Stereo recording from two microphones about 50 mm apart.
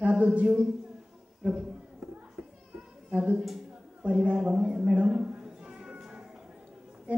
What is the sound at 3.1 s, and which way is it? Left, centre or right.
A woman's voice, right.